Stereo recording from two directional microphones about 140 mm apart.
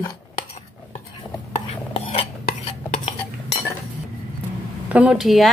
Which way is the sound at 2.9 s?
50° left (ahead or behind).